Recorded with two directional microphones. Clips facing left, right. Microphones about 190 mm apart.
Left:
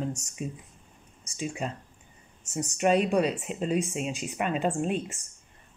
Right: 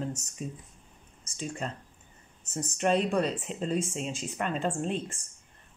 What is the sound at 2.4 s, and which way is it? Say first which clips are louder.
Speech: left 3 dB; centre (ahead or behind).